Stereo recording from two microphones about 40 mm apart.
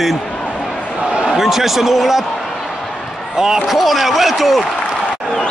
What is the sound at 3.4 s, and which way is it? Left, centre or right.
Speech, centre.